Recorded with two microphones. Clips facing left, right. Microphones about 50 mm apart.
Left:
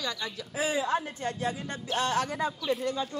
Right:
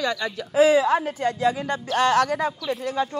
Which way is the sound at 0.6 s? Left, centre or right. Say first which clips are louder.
Right 11 dB; right.